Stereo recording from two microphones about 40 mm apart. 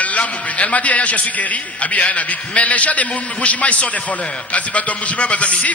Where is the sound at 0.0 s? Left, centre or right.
Left.